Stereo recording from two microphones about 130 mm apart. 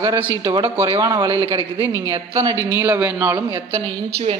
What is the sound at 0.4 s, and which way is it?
Speech, 25° right (ahead or behind).